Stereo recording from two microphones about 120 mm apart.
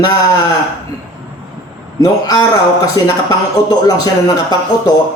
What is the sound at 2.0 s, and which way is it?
Speech, 30° left (ahead or behind).